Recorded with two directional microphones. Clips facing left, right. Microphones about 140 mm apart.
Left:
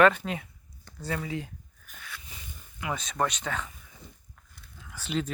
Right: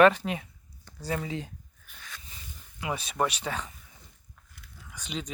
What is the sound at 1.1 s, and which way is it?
Speech, 25° right (ahead or behind).